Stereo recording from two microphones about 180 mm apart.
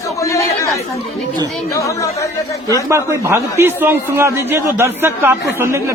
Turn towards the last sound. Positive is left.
turn(degrees=-15)  # may be behind; listen again after turning